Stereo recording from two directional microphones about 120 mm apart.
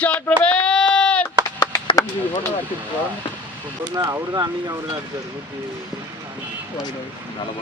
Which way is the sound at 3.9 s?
30° right (ahead or behind).